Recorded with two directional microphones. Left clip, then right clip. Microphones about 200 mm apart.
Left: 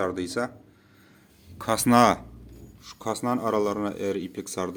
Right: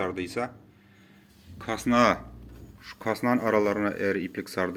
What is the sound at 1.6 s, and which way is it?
Speech, 40° left (ahead or behind).